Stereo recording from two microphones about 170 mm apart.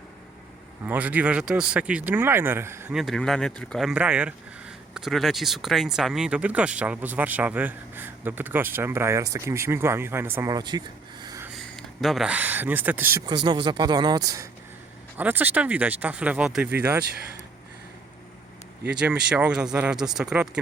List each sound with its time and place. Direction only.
0.9 s speech: 10° right (ahead or behind)
2.9 s speech: centre (ahead or behind); by 11.4 s 20° right (ahead or behind)
11.8 s speech: centre (ahead or behind)
13.2 s speech: 25° right (ahead or behind)
15.2 s speech: 10° right (ahead or behind)
18.9 s speech: 5° right (ahead or behind)